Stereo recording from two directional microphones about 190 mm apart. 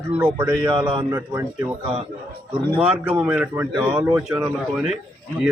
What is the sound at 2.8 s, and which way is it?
A man's voice, 5° right (ahead or behind).